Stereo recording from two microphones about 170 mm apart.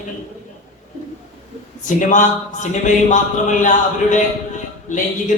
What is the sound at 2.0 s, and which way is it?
A man's voice, 45° left (ahead or behind).